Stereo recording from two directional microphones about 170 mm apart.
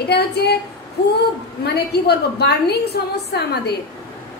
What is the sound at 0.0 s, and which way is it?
Speech, 75° left (ahead or behind).